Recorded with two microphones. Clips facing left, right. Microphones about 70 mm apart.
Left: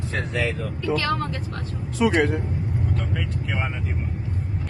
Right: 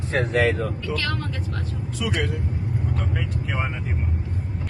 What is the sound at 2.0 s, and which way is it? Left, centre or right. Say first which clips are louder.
Speech: left 7 dB; left.